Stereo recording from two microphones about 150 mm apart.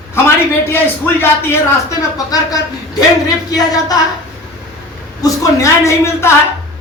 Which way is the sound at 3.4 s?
25° left (ahead or behind).